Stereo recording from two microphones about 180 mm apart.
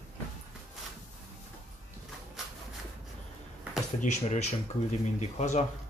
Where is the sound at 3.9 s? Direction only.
40° left (ahead or behind).